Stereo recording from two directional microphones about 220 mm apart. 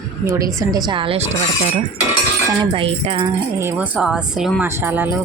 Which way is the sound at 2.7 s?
25° right (ahead or behind).